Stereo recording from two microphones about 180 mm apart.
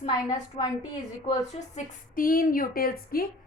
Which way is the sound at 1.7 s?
50° left (ahead or behind).